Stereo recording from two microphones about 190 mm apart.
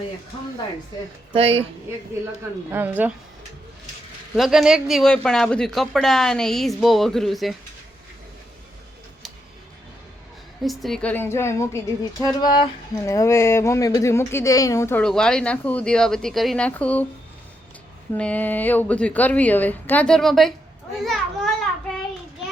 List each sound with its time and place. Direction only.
1.3 s speech: 30° right (ahead or behind)
2.6 s a woman's voice: 10° right (ahead or behind)
4.4 s speech: centre (ahead or behind)
10.6 s speech: centre (ahead or behind)
18.1 s speech: 10° left (ahead or behind)
21.0 s children playing: centre (ahead or behind)